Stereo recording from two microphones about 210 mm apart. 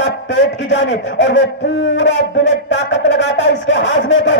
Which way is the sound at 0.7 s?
55° left (ahead or behind).